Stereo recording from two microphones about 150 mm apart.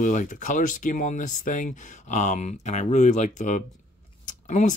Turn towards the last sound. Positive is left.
turn(degrees=55)  # may be behind; listen again after turning